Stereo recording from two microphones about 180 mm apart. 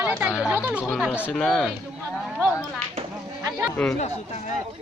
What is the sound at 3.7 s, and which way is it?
Speech, 10° left (ahead or behind).